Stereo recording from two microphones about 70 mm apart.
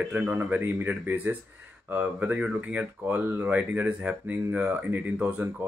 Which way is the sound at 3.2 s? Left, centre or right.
Right.